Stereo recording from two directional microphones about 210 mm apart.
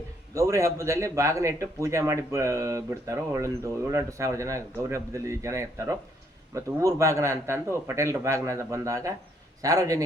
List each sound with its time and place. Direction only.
0.3 s a man's voice: 15° right (ahead or behind)